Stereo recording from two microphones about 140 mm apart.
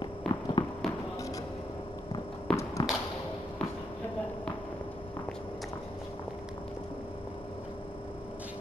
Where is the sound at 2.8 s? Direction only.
30° left (ahead or behind).